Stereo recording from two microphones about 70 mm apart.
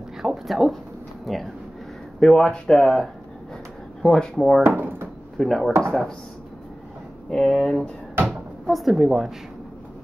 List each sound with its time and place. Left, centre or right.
0.2 s speech: centre
4.6 s drawer open or close: right
5.4 s a woman's voice: centre
5.7 s speech: right
7.2 s a woman's voice: centre